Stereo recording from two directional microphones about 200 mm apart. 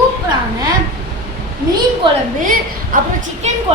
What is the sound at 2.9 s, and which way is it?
Speech, 45° right (ahead or behind).